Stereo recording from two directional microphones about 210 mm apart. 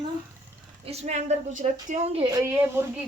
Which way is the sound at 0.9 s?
30° right (ahead or behind).